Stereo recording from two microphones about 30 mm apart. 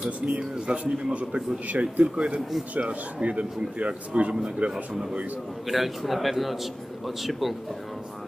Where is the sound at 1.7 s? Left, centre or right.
Right.